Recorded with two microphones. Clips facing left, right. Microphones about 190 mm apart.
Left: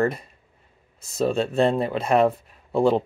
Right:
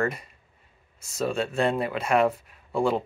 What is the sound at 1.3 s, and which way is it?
Speech, 35° left (ahead or behind).